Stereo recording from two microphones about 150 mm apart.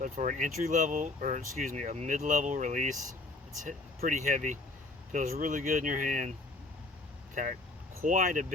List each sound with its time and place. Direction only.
0.0 s speech: 60° right (ahead or behind)
8.0 s speech: 65° right (ahead or behind)